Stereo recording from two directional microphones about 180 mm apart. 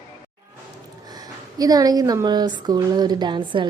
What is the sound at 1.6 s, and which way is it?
Speech, 20° right (ahead or behind).